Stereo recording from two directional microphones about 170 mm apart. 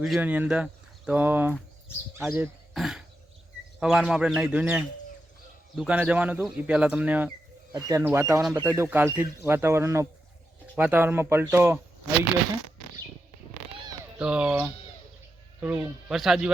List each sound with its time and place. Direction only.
0.0 s speech: 5° right (ahead or behind)
2.7 s cough: centre (ahead or behind)
3.8 s speech: 5° right (ahead or behind)
7.7 s speech: 20° right (ahead or behind)
14.2 s speech: 5° right (ahead or behind)